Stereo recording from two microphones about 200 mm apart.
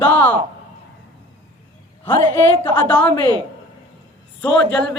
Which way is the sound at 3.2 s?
20° right (ahead or behind).